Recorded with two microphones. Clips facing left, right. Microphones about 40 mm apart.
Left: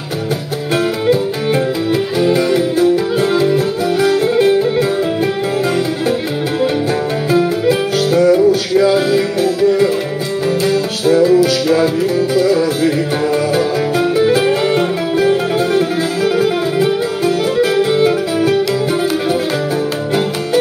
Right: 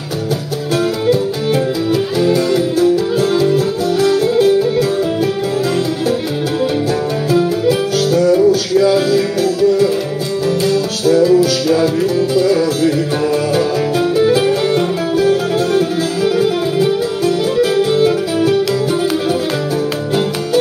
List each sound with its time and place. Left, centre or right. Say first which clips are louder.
2.1 s music: left 1 dB; left
7.2 s music: even; left